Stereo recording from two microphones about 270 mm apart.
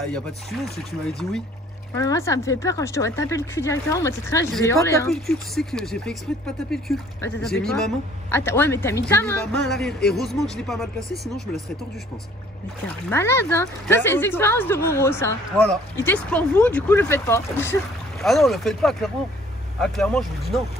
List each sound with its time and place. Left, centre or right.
0.0 s speech: centre
2.0 s speech: centre
12.8 s speech: centre